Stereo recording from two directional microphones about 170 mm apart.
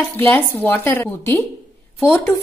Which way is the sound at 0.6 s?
10° left (ahead or behind).